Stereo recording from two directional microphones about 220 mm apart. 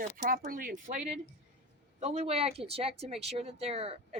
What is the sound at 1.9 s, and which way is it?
Speech, 30° right (ahead or behind).